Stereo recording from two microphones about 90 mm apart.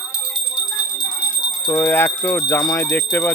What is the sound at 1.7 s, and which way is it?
Speech, 25° left (ahead or behind).